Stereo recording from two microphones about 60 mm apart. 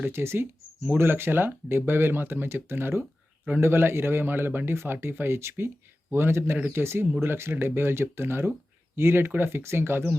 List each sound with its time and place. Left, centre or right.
0.1 s speech: right